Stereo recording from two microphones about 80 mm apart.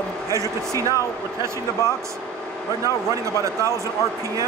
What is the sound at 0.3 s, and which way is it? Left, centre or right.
Speech, right.